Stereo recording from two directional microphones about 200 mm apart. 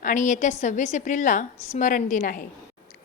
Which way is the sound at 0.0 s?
40° left (ahead or behind).